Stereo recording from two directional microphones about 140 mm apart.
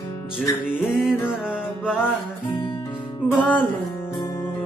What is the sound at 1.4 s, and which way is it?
Music, 5° right (ahead or behind).